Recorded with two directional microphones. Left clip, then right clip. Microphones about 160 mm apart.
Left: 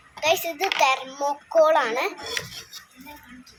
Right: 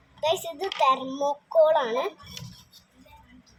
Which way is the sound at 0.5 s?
55° left (ahead or behind).